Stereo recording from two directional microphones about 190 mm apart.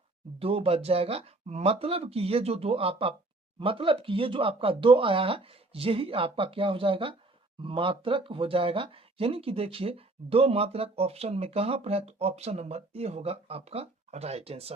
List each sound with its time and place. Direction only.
0.3 s speech: 30° right (ahead or behind)